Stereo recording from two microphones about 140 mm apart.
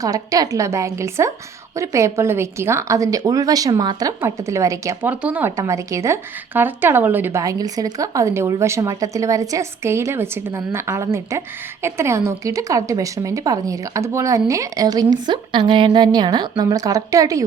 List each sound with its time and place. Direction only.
0.0 s a woman's voice: 25° right (ahead or behind)
5.2 s a woman's voice: 10° right (ahead or behind)